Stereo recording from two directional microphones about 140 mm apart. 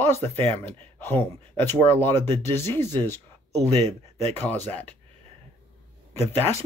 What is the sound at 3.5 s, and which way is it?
Speech, 50° right (ahead or behind).